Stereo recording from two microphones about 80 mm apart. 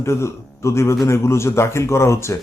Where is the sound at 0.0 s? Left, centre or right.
Left.